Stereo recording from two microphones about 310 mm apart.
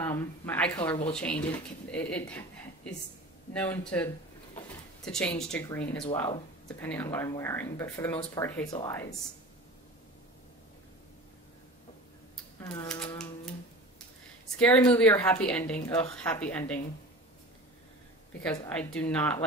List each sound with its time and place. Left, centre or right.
0.0 s speech: centre
12.5 s typewriter: centre
14.6 s speech: centre
18.4 s speech: centre